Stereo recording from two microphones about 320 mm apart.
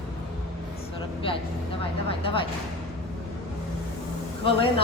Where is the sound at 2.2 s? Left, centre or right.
Centre.